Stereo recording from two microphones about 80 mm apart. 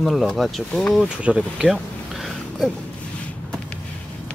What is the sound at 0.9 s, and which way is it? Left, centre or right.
Speech, centre.